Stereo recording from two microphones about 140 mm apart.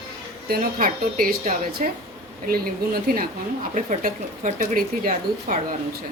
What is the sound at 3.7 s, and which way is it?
Speech, 70° right (ahead or behind).